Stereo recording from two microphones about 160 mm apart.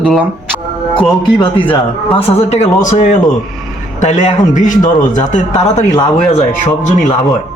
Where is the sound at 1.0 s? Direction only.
30° left (ahead or behind); by 5.8 s 50° left (ahead or behind).